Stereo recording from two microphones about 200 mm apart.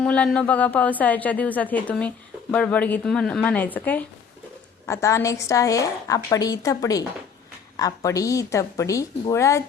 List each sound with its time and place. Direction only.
0.0 s a woman's voice: 5° left (ahead or behind)